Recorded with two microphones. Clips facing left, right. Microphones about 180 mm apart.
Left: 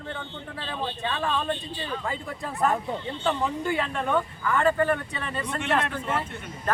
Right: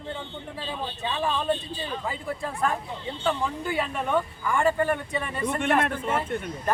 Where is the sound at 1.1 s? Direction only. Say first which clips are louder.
Right 3 dB; 10° right (ahead or behind).